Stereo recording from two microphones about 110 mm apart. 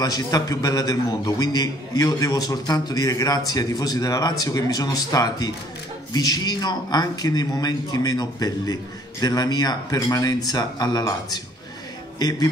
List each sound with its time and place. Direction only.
0.0 s a man's voice: 35° left (ahead or behind)